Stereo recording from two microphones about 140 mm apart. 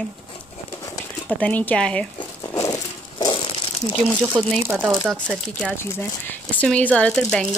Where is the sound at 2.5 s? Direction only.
25° left (ahead or behind).